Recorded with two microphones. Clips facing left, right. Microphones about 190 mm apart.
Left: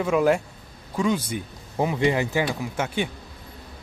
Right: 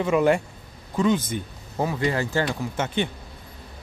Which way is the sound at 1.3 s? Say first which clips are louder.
Even; 10° left (ahead or behind).